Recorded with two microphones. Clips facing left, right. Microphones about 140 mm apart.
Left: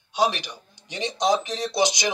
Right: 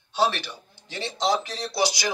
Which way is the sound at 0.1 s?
15° left (ahead or behind).